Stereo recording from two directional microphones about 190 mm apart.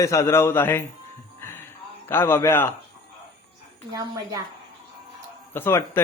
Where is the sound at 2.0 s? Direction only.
10° left (ahead or behind).